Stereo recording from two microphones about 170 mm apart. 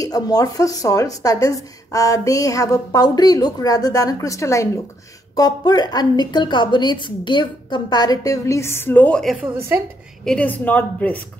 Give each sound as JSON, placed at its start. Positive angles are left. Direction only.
{"t": 0.0, "sound": "a woman's voice", "side_deg": 20}